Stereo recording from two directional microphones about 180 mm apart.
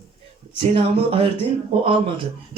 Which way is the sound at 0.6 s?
35° right (ahead or behind).